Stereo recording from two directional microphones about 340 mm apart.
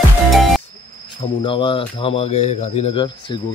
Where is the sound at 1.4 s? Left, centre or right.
Centre.